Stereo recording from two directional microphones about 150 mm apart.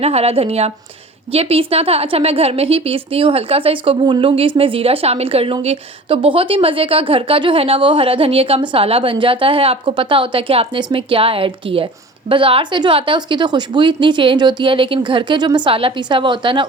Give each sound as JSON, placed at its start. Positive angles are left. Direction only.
{"t": 0.0, "sound": "a woman's voice", "side_deg": -45}